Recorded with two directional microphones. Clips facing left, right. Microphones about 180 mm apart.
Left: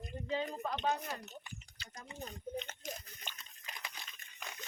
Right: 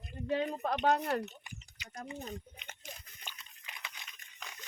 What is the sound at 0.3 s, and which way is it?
Speech, 65° right (ahead or behind).